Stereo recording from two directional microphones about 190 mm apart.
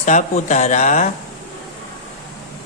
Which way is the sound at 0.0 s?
40° left (ahead or behind).